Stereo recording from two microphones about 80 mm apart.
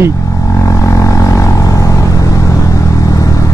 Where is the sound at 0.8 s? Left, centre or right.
Left.